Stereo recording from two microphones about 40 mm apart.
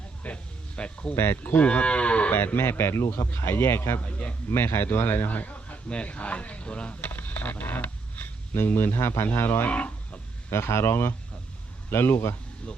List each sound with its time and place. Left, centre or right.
0.2 s a man's voice: left
0.8 s cattle: left
1.1 s speech: left
1.6 s cattle: left
2.3 s speech: left
4.0 s a man's voice: left
4.5 s a man's voice: left
7.0 s a sound: left
8.6 s speech: left
9.6 s speech: left
10.7 s speech: left